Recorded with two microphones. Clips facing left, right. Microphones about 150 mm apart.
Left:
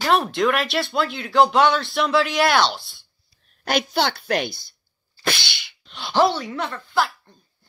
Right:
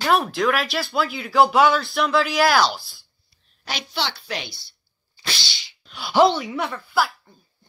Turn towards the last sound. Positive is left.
turn(degrees=-5)  # may be behind; listen again after turning